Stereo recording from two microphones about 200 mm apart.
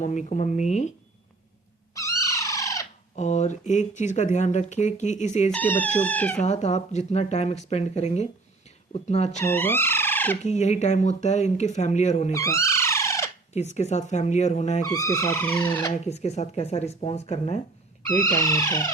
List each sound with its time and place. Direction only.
0.0 s speech: 35° left (ahead or behind)
2.0 s cat: 15° left (ahead or behind)
3.2 s speech: 35° left (ahead or behind)
5.5 s speech: 10° left (ahead or behind)
6.4 s speech: 35° left (ahead or behind)
9.4 s music: 10° left (ahead or behind)
10.4 s speech: 35° left (ahead or behind)
12.3 s music: 15° left (ahead or behind)
13.5 s speech: 35° left (ahead or behind)
14.8 s speech: 20° left (ahead or behind)
16.0 s speech: 35° left (ahead or behind)
18.2 s speech: 15° left (ahead or behind)